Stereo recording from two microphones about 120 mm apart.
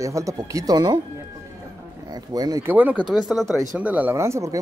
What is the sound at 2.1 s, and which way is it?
Speech, 30° right (ahead or behind).